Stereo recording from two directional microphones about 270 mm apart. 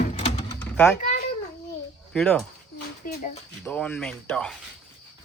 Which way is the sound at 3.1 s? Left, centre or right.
Left.